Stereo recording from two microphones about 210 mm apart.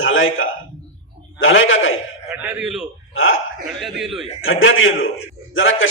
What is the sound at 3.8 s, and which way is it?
Speech, centre (ahead or behind).